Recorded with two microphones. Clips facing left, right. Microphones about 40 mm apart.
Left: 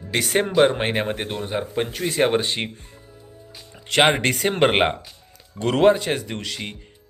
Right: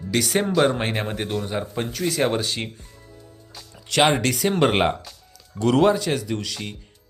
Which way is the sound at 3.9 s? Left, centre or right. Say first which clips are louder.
Left 1 dB; left.